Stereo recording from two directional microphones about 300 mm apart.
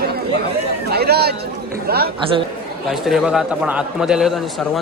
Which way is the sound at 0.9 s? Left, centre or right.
Right.